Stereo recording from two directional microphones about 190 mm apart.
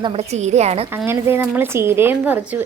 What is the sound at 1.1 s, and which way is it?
Speech, 10° right (ahead or behind).